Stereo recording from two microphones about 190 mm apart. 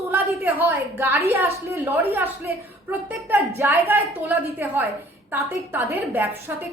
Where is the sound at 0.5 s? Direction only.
10° right (ahead or behind).